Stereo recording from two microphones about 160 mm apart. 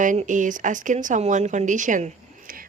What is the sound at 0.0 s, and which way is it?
Speech, 50° right (ahead or behind).